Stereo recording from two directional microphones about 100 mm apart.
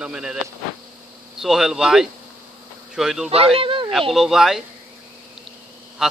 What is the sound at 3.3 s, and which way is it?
Speech, 70° right (ahead or behind).